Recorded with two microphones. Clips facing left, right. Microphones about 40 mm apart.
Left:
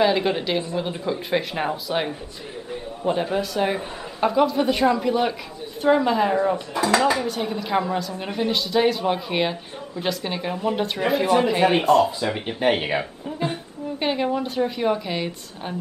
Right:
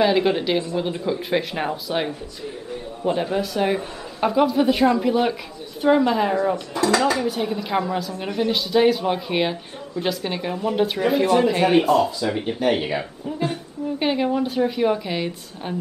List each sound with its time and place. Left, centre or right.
0.0 s a man's voice: centre
6.5 s speech: centre
7.2 s a man's voice: centre
12.3 s speech: centre
13.9 s a man's voice: centre